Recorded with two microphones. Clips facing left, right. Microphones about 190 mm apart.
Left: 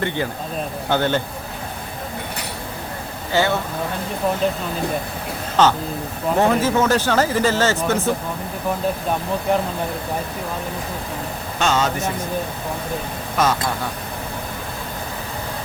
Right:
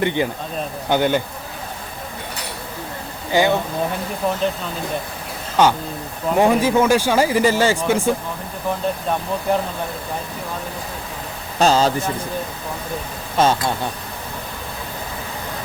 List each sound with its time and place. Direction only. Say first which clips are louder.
0.0 s speech: right 3 dB; 15° right (ahead or behind)
3.3 s speech: right 3 dB; 15° right (ahead or behind)
5.6 s speech: right 1 dB; 10° right (ahead or behind)
11.6 s speech: right 4 dB; 30° right (ahead or behind)
13.3 s speech: right 3 dB; 30° right (ahead or behind)